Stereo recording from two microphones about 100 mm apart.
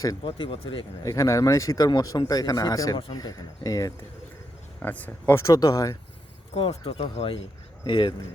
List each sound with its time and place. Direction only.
0.3 s speech: 60° left (ahead or behind)
1.0 s speech: 35° left (ahead or behind)
4.8 s speech: 15° left (ahead or behind)
5.4 s speech: 40° left (ahead or behind)
6.5 s speech: 80° left
7.0 s speech: 65° left (ahead or behind)
7.9 s speech: 55° left (ahead or behind)